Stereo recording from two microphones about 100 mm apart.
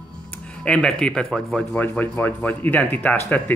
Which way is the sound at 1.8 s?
15° left (ahead or behind).